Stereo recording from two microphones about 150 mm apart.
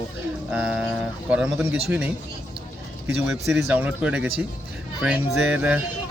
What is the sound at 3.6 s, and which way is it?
Speech, 10° right (ahead or behind).